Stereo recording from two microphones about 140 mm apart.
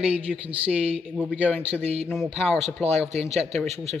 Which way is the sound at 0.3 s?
10° right (ahead or behind).